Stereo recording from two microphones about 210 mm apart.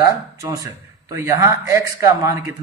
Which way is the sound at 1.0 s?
15° right (ahead or behind).